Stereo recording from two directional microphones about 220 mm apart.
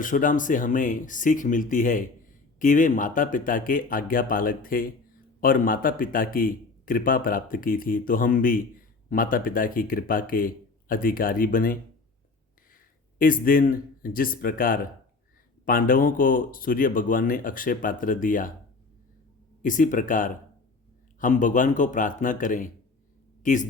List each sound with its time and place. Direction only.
0.0 s a man's voice: 35° left (ahead or behind)
13.1 s a man's voice: 40° left (ahead or behind)
19.6 s a man's voice: 35° left (ahead or behind)